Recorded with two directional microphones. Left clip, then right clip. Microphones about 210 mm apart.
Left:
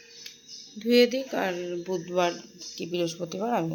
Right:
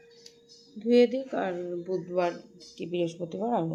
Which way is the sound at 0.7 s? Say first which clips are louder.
Left 1 dB; centre (ahead or behind).